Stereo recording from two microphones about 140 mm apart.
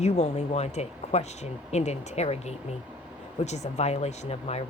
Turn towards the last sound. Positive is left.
turn(degrees=50)  # may be behind; listen again after turning